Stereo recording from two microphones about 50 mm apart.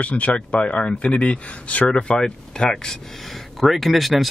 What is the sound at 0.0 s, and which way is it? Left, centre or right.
Speech, left.